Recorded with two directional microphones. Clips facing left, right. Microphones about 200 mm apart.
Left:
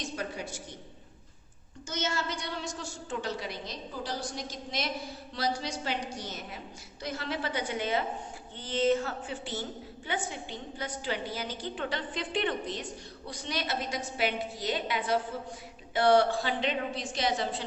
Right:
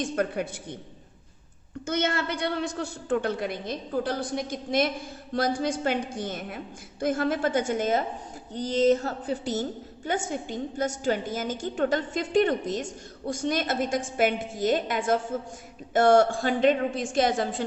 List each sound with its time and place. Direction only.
0.0 s a woman's voice: 55° right (ahead or behind)
1.9 s a woman's voice: 60° right (ahead or behind)